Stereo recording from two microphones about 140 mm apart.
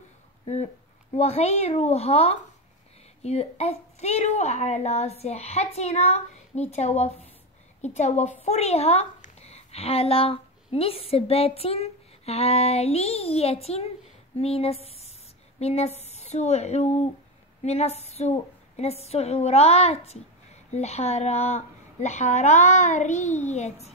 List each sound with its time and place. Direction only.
1.1 s a woman's voice: 50° left (ahead or behind)